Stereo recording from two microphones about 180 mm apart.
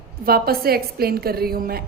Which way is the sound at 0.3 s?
60° right (ahead or behind).